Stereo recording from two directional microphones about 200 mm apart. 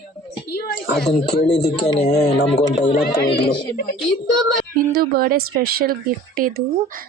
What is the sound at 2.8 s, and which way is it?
Speech, 50° left (ahead or behind).